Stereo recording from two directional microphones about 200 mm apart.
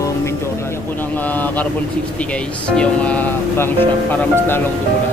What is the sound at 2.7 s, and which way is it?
Speech, 5° left (ahead or behind).